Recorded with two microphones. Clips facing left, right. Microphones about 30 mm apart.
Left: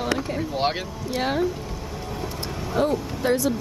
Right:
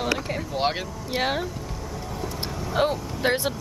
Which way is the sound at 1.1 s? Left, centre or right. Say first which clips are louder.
Left 1 dB; centre.